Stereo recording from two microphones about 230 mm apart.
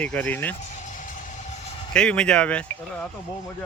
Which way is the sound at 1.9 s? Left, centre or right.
Centre.